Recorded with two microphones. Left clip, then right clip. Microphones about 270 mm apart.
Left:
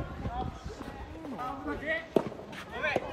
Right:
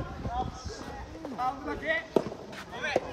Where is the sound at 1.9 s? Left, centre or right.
Right.